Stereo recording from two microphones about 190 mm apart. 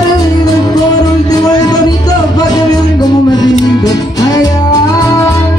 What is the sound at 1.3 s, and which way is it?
Music, 20° left (ahead or behind).